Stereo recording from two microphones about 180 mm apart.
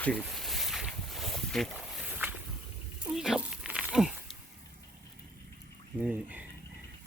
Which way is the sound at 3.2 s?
5° right (ahead or behind).